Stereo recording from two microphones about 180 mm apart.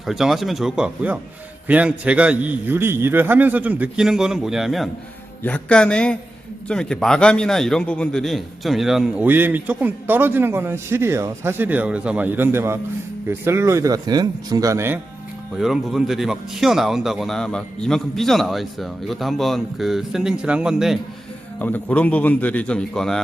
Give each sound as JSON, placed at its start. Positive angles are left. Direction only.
{"t": 0.0, "sound": "a man's voice", "side_deg": 0}
{"t": 15.5, "sound": "a man's voice", "side_deg": 0}
{"t": 21.6, "sound": "a man's voice", "side_deg": 10}